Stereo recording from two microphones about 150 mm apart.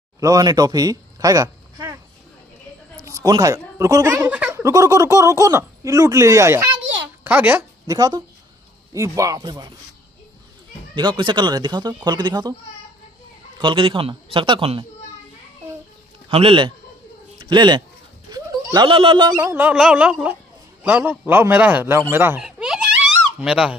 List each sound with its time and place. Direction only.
0.2 s speech: 25° right (ahead or behind)
3.1 s speech: 25° right (ahead or behind)
4.6 s a man's voice: 20° right (ahead or behind)
7.8 s speech: 25° right (ahead or behind)
11.0 s speech: 30° right (ahead or behind)
13.6 s a man's voice: 35° right (ahead or behind)
16.3 s a man's voice: 40° right (ahead or behind)
18.3 s a sound: 25° right (ahead or behind)
19.3 s a man's voice: 15° right (ahead or behind)
22.4 s giggle: 5° right (ahead or behind)